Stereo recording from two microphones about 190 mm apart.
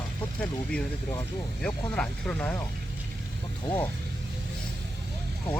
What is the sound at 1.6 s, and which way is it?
Speech, 5° left (ahead or behind).